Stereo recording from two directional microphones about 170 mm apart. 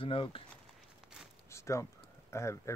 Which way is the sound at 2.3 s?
15° left (ahead or behind).